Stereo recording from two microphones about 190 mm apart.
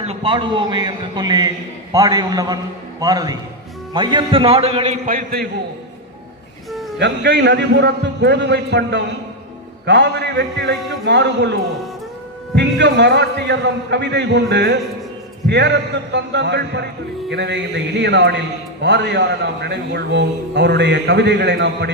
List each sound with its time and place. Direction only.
0.0 s a man's voice: 30° right (ahead or behind)
5.0 s a man's voice: 50° right (ahead or behind)
6.7 s a sound: centre (ahead or behind)
7.0 s a man's voice: 65° right (ahead or behind)
12.5 s a man's voice: 65° right (ahead or behind)